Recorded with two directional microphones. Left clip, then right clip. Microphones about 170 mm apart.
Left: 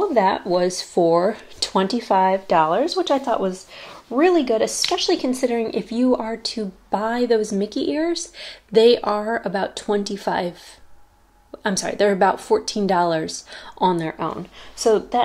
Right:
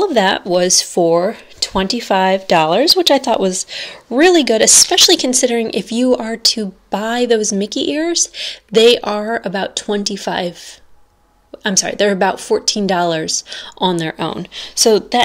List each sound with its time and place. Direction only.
0.1 s a woman's voice: 30° right (ahead or behind)
1.3 s speech: 5° right (ahead or behind)
2.0 s a woman's voice: 25° right (ahead or behind)
2.3 s speech: 45° right (ahead or behind); by 10.5 s 25° right (ahead or behind)
11.6 s a woman's voice: 25° right (ahead or behind)
14.1 s speech: 50° right (ahead or behind)